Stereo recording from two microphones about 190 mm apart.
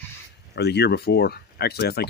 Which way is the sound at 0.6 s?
60° left (ahead or behind).